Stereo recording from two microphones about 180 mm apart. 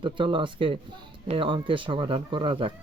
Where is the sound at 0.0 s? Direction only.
25° right (ahead or behind).